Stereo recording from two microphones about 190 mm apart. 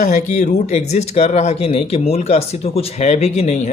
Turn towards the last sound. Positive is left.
turn(degrees=35)  # may be behind; listen again after turning